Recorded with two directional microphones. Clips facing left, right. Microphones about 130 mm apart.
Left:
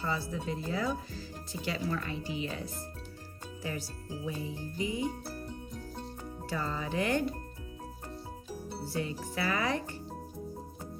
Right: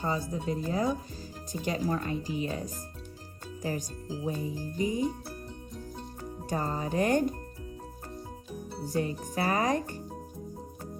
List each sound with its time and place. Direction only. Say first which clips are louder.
0.0 s music: right 3 dB; 45° right (ahead or behind)
4.8 s music: right 4 dB; 45° right (ahead or behind)
6.5 s music: right 4 dB; 45° right (ahead or behind)
8.9 s music: right 5 dB; 45° right (ahead or behind)